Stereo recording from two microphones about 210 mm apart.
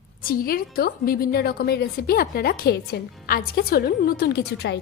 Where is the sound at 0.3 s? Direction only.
45° left (ahead or behind).